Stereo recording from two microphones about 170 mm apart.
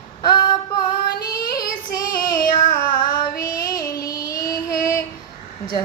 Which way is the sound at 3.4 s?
20° left (ahead or behind).